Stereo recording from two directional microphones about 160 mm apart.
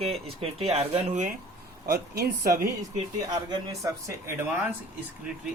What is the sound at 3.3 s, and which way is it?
Speech, 25° right (ahead or behind).